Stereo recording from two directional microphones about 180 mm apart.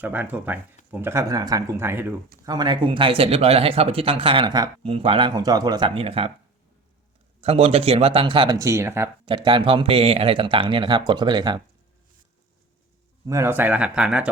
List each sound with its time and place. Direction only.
0.0 s speech: 10° right (ahead or behind); by 6.3 s 30° right (ahead or behind)
7.4 s speech: 35° right (ahead or behind); by 9.0 s 15° right (ahead or behind)
9.2 s speech: 25° right (ahead or behind)
13.2 s speech: 15° right (ahead or behind)